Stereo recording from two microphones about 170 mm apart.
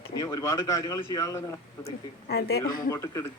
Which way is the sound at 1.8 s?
70° left (ahead or behind).